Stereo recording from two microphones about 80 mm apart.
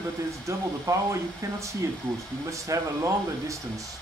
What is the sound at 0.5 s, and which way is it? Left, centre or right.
Speech, right.